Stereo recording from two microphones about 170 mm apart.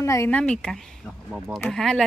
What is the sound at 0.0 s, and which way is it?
A woman's voice, 15° left (ahead or behind).